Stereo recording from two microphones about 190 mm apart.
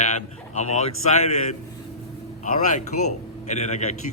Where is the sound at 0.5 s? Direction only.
35° left (ahead or behind).